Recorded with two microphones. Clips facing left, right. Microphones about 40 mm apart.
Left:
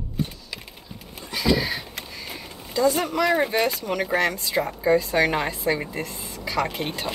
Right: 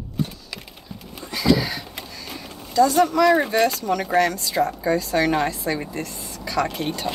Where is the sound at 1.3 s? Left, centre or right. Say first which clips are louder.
Right 3 dB; centre.